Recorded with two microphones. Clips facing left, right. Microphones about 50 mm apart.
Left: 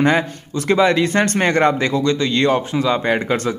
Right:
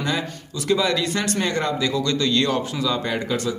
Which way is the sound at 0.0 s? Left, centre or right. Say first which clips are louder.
Left 9 dB; left.